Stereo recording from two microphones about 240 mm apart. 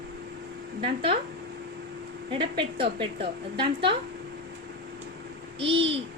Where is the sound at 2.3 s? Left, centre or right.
Right.